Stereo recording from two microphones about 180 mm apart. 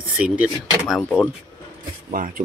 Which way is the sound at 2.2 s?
50° right (ahead or behind).